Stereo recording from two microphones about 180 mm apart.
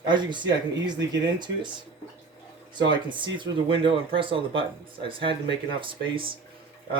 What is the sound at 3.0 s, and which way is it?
Speech, 25° right (ahead or behind).